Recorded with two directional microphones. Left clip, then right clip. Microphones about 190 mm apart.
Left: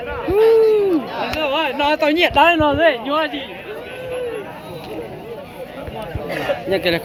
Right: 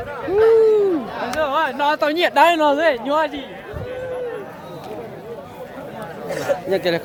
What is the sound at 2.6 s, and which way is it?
Speech, 55° right (ahead or behind).